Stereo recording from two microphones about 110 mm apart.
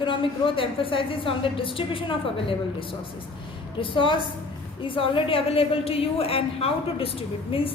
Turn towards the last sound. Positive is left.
turn(degrees=55)  # may be behind; listen again after turning